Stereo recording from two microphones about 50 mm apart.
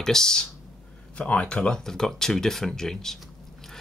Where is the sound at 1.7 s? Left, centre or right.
Centre.